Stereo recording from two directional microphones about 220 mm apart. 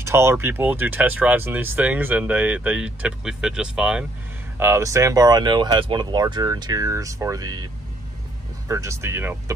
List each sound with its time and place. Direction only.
0.0 s speech: 10° right (ahead or behind)
8.6 s speech: 15° right (ahead or behind)